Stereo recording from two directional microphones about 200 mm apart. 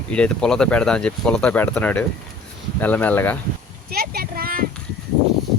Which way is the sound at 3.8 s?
50° right (ahead or behind).